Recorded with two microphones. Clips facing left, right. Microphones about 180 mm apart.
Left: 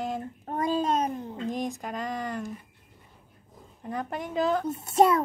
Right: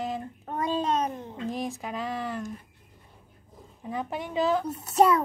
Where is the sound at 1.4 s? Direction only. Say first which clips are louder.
Even; 5° right (ahead or behind).